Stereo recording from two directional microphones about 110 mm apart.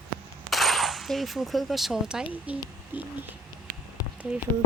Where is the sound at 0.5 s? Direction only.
Centre (ahead or behind).